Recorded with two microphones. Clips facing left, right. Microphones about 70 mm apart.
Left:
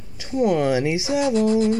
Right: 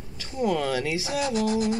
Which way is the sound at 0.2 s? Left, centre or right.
Centre.